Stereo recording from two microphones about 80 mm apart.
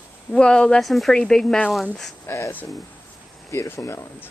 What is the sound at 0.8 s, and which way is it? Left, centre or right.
Speech, centre.